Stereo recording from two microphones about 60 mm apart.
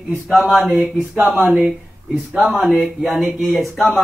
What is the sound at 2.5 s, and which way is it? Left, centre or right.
A man's voice, centre.